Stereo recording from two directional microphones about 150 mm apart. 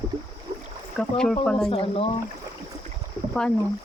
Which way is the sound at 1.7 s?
40° left (ahead or behind).